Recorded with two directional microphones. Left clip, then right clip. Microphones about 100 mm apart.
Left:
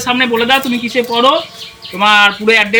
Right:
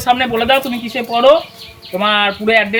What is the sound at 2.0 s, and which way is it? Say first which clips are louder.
Speech: left 5 dB; 45° right (ahead or behind).